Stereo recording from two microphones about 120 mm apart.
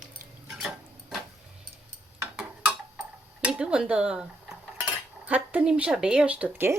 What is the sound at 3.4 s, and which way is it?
A woman's voice, 5° right (ahead or behind).